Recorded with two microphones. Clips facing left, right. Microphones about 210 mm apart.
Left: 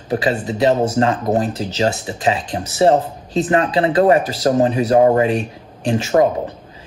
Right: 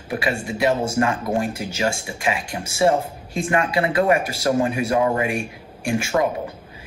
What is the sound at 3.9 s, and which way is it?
Speech, 35° left (ahead or behind).